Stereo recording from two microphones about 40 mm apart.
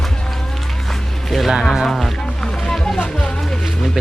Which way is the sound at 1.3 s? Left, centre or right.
Centre.